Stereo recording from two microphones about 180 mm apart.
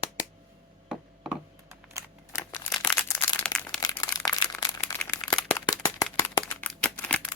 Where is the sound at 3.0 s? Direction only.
15° left (ahead or behind).